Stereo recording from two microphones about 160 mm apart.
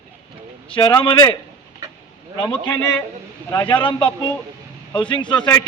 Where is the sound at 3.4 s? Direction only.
15° left (ahead or behind).